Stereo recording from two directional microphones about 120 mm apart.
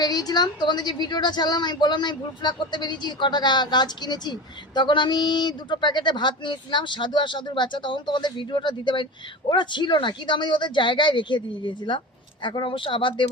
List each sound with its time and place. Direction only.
0.0 s a woman's voice: 35° left (ahead or behind)